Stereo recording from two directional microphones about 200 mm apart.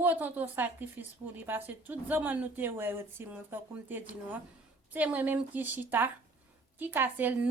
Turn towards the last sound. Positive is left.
turn(degrees=-10)  # may be behind; listen again after turning